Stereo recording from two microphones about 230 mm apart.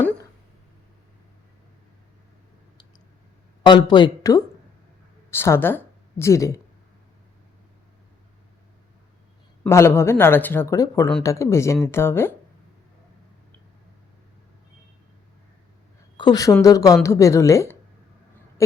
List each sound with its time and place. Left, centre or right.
3.7 s speech: centre
9.6 s a woman's voice: centre
16.1 s a woman's voice: centre